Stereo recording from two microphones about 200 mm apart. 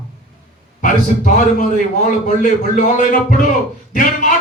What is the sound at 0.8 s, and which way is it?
Speech, 40° left (ahead or behind).